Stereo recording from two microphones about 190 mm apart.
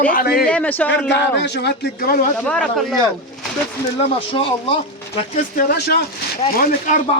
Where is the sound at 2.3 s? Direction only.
5° left (ahead or behind).